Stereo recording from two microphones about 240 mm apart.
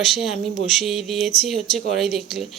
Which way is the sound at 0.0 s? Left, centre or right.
Centre.